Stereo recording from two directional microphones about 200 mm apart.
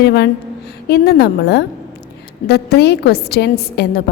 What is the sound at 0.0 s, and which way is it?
A woman's voice, 55° left (ahead or behind).